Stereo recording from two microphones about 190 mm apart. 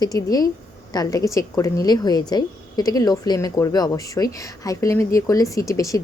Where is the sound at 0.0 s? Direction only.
20° left (ahead or behind).